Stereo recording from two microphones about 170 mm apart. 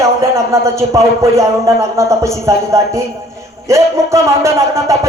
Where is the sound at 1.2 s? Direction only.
15° right (ahead or behind).